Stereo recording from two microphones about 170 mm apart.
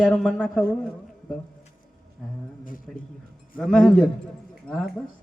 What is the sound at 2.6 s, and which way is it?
Speech, 55° left (ahead or behind).